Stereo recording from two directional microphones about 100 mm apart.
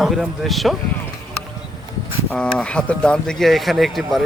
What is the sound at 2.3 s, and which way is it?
Speech, 10° left (ahead or behind).